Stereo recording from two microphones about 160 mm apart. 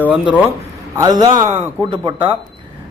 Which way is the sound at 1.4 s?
45° right (ahead or behind).